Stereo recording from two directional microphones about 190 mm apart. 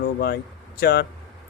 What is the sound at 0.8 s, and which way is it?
Speech, 55° left (ahead or behind).